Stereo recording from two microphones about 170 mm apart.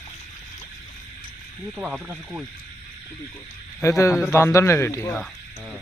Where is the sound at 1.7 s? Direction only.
5° right (ahead or behind).